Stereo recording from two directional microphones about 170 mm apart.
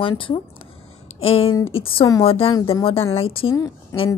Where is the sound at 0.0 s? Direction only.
30° left (ahead or behind).